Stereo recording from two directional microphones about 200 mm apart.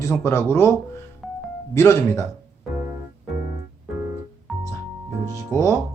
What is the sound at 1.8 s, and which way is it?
Speech, 15° left (ahead or behind).